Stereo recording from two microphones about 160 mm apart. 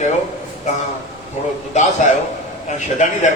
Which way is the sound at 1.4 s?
45° left (ahead or behind).